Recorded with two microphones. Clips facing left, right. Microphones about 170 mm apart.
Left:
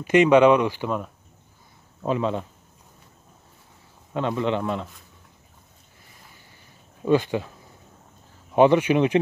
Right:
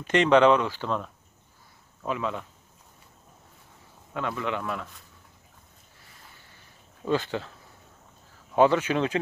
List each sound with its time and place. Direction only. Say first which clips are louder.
0.0 s speech: left 4 dB; 10° left (ahead or behind)
2.0 s speech: left 6 dB; 30° left (ahead or behind)
4.1 s a man's voice: left 6 dB; 30° left (ahead or behind)
7.1 s speech: left 6 dB; 15° left (ahead or behind)
8.5 s speech: left 4 dB; 15° left (ahead or behind)